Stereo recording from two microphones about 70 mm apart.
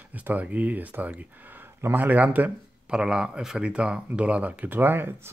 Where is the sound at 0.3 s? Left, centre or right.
Right.